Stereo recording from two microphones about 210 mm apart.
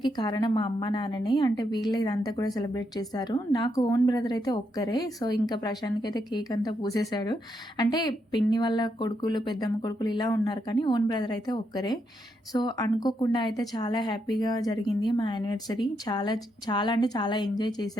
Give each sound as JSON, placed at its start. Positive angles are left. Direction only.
{"t": 0.0, "sound": "a woman's voice", "side_deg": 20}